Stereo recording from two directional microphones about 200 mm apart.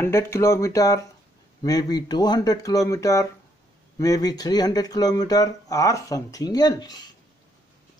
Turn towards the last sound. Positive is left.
turn(degrees=20)  # may be behind; listen again after turning